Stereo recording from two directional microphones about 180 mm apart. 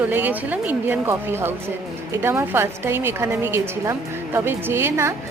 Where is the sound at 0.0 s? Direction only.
10° right (ahead or behind).